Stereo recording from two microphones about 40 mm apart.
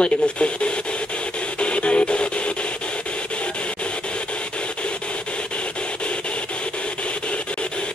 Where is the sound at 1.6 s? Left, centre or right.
Left.